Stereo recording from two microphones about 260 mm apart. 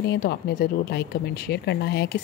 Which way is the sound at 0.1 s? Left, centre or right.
Left.